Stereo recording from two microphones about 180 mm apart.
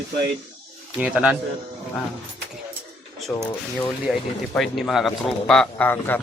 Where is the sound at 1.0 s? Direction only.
5° right (ahead or behind).